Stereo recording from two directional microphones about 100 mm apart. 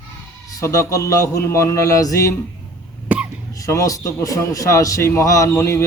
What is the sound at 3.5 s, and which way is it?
A man's voice, 35° left (ahead or behind).